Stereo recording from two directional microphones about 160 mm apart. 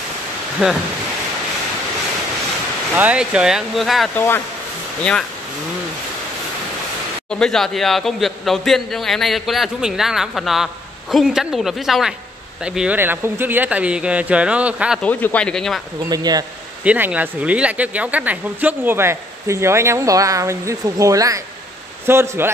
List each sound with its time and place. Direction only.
0.6 s speech: 5° right (ahead or behind)
2.9 s speech: 10° right (ahead or behind)
4.1 s speech: 15° left (ahead or behind)
7.2 s speech: 5° left (ahead or behind)
15.0 s speech: 10° left (ahead or behind)
16.1 s speech: 25° right (ahead or behind)
16.8 s speech: 10° right (ahead or behind)